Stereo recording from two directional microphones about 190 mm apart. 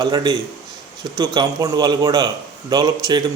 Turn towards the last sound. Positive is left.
turn(degrees=-20)  # may be behind; listen again after turning